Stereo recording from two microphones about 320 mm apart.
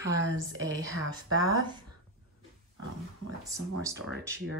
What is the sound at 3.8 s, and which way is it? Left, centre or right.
Speech, centre.